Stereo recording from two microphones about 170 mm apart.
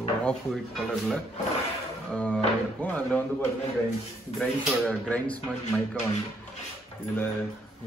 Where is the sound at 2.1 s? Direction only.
5° left (ahead or behind).